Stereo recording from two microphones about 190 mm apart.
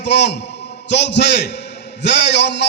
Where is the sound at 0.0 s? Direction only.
65° left (ahead or behind).